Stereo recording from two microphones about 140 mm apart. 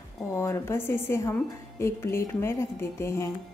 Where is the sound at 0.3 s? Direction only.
20° left (ahead or behind).